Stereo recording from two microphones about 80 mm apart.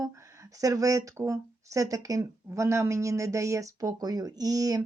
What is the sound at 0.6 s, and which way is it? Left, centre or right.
Speech, right.